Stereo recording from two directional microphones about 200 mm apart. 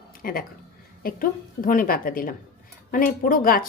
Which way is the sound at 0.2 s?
45° left (ahead or behind).